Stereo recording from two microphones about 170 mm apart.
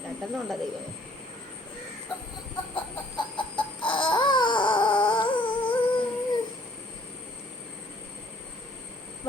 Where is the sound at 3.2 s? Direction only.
30° left (ahead or behind).